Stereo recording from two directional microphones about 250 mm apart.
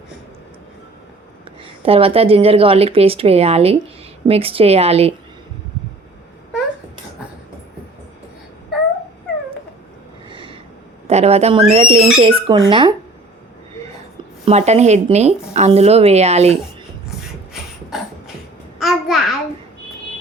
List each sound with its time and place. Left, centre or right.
1.8 s speech: right
10.2 s a sound: centre
11.1 s speech: right
14.4 s speech: right
17.1 s beatboxing: centre
18.8 s a sound: centre